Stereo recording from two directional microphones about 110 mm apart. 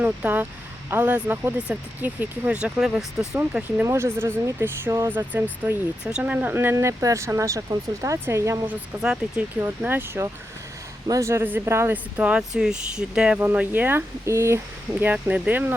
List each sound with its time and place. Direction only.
0.0 s speech: 15° right (ahead or behind)
3.8 s speech: 25° right (ahead or behind)
8.6 s speech: 10° right (ahead or behind)
9.6 s speech: 20° right (ahead or behind)